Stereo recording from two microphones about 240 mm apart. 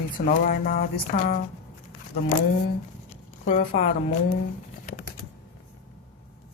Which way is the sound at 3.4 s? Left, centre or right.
Left.